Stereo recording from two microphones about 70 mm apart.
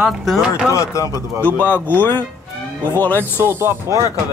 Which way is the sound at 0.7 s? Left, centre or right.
Left.